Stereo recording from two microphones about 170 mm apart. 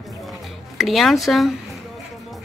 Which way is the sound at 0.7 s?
Centre (ahead or behind).